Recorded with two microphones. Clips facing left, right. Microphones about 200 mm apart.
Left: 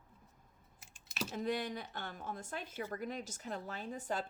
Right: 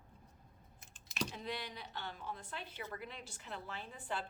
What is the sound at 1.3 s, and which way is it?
A woman's voice, 45° left (ahead or behind).